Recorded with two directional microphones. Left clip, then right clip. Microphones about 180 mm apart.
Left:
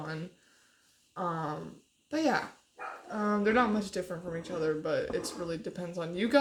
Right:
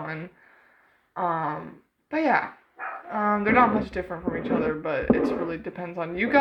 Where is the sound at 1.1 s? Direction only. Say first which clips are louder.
Right 8 dB; 35° left (ahead or behind).